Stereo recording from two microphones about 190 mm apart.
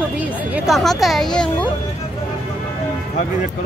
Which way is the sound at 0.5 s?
Centre (ahead or behind).